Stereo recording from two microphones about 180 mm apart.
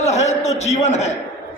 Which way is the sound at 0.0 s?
40° left (ahead or behind).